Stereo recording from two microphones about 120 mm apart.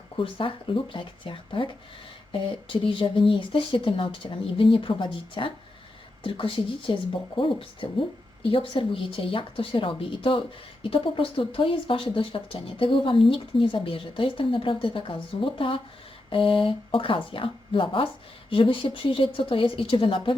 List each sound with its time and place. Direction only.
0.2 s speech: 45° left (ahead or behind)